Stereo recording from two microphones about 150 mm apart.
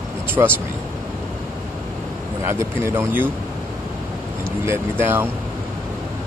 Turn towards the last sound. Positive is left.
turn(degrees=-15)  # may be behind; listen again after turning